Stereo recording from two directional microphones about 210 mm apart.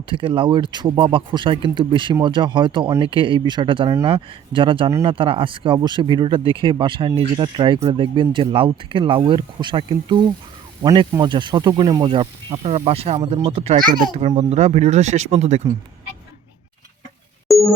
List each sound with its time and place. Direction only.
0.1 s speech: 25° right (ahead or behind)
17.5 s music: centre (ahead or behind)